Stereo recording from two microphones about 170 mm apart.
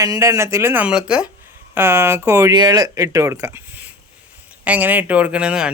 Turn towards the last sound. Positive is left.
turn(degrees=-5)  # may be behind; listen again after turning